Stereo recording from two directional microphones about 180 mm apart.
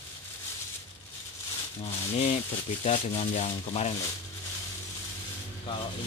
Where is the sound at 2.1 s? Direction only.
40° left (ahead or behind).